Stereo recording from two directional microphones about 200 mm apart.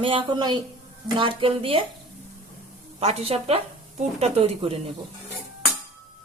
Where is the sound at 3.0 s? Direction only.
30° right (ahead or behind).